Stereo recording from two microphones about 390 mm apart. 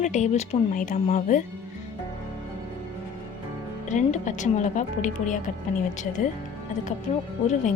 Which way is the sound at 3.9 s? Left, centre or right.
Centre.